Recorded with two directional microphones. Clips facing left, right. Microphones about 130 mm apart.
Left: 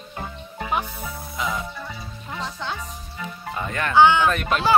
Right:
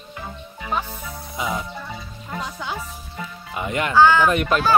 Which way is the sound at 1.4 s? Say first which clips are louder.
Right 1 dB; 20° right (ahead or behind).